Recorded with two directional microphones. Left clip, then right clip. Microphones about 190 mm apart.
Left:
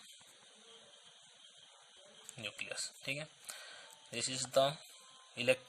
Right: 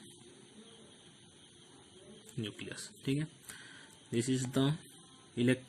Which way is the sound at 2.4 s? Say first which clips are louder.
Left 4 dB; 30° left (ahead or behind).